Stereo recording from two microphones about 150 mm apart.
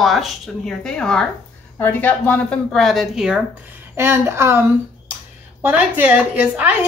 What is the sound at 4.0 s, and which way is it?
A woman's voice, 15° right (ahead or behind).